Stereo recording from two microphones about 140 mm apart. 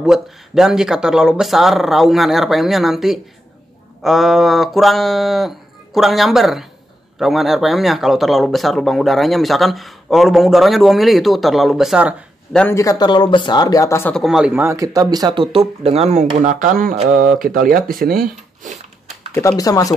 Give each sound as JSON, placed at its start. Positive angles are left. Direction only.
{"t": 0.0, "sound": "speech", "side_deg": -5}
{"t": 12.7, "sound": "speech", "side_deg": 25}
{"t": 14.1, "sound": "speech", "side_deg": 0}
{"t": 14.5, "sound": "speech", "side_deg": -20}
{"t": 17.4, "sound": "speech", "side_deg": -85}
{"t": 19.3, "sound": "speech", "side_deg": 25}